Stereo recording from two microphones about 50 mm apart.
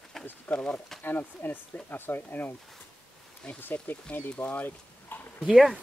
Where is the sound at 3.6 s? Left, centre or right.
Left.